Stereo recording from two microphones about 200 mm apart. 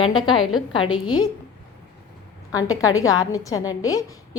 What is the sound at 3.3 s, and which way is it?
Speech, 15° left (ahead or behind).